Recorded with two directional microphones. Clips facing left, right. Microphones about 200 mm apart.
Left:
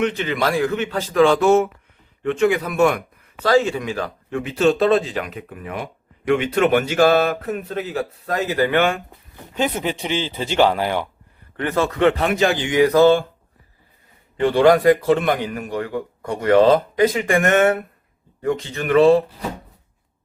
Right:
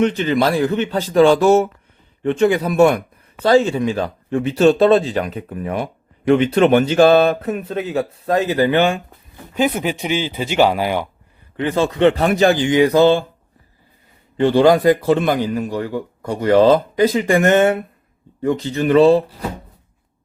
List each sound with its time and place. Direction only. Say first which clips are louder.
0.0 s a man's voice: right 5 dB; 35° right (ahead or behind)
9.6 s speech: right 3 dB; 10° right (ahead or behind)
12.1 s a man's voice: right 4 dB; 40° right (ahead or behind)
12.7 s speech: left 3 dB; 25° right (ahead or behind)
14.3 s a man's voice: right 2 dB; 30° right (ahead or behind)